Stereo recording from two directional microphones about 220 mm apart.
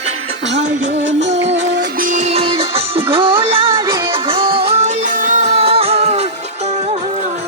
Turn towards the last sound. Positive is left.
turn(degrees=-30)  # may be behind; listen again after turning